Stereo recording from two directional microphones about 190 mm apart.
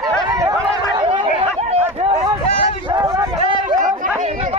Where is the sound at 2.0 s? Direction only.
35° right (ahead or behind).